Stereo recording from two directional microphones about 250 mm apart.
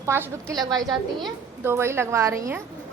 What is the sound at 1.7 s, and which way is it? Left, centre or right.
Speech, centre.